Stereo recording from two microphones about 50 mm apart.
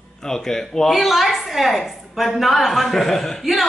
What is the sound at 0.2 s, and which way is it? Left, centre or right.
A woman's voice, centre.